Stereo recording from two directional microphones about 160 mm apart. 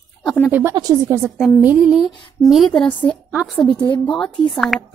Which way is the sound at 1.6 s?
5° right (ahead or behind).